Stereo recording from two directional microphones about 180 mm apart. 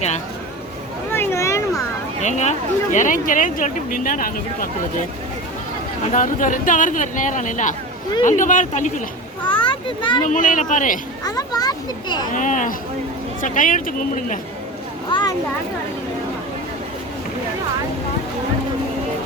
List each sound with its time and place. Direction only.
1.1 s a sound: 15° left (ahead or behind)
2.2 s speech: 40° left (ahead or behind)
6.1 s speech: 45° left (ahead or behind)
9.4 s a child's voice: 25° left (ahead or behind)
10.2 s speech: 45° left (ahead or behind)
11.2 s a child's voice: 20° left (ahead or behind)
12.3 s speech: 45° left (ahead or behind)
15.1 s speech: 20° left (ahead or behind)